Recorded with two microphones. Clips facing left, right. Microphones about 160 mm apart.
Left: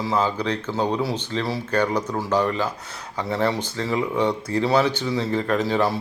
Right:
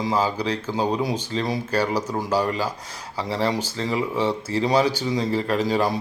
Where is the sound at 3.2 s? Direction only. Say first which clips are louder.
Left 1 dB; 35° right (ahead or behind).